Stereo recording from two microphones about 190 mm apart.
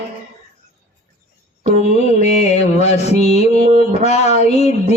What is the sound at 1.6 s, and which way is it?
A man's voice, 35° left (ahead or behind).